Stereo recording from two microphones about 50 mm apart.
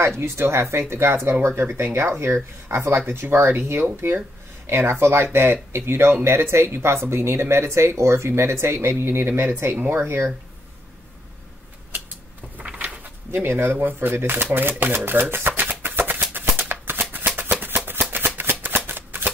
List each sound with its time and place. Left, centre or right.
0.0 s speech: right
3.1 s speech: right
12.5 s a sound: right
13.3 s speech: right
15.6 s shuffling cards: right
17.6 s a sound: right
18.1 s shuffling cards: right